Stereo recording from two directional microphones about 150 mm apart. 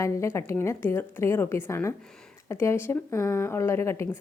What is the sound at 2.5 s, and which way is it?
A woman's voice, 20° left (ahead or behind).